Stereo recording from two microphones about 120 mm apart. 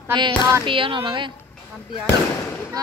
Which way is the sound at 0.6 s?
45° right (ahead or behind).